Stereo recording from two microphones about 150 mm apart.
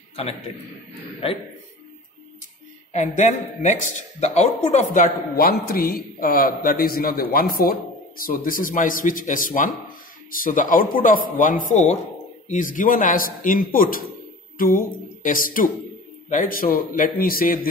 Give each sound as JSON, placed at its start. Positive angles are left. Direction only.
{"t": 0.1, "sound": "a man's voice", "side_deg": 40}
{"t": 2.9, "sound": "a man's voice", "side_deg": 50}